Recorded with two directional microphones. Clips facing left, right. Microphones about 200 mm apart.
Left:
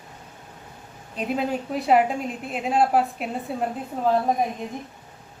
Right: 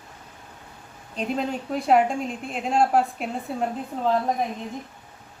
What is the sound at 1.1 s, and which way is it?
A woman's voice, 5° left (ahead or behind).